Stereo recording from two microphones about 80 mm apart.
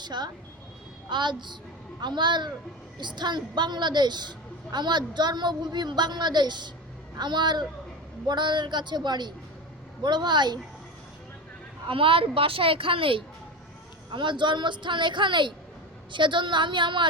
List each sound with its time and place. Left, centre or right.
0.0 s a woman's voice: right
11.9 s a woman's voice: right